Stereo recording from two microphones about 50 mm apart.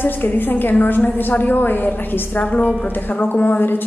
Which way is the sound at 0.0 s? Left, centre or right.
Left.